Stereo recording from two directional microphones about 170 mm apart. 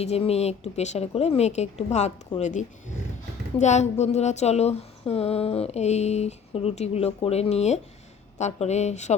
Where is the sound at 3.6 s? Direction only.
45° left (ahead or behind).